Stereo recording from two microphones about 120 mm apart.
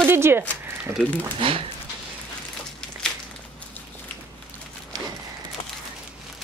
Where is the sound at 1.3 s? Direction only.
50° right (ahead or behind).